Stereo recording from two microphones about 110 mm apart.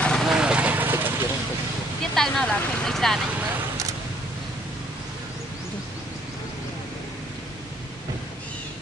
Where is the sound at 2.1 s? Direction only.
5° left (ahead or behind).